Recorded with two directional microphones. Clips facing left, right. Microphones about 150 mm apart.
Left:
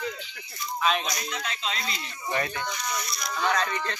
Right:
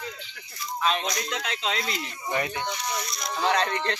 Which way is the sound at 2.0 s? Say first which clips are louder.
Right 1 dB; 15° right (ahead or behind).